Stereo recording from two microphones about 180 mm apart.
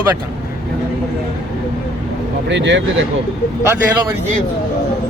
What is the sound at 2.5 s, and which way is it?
Speech, 85° right.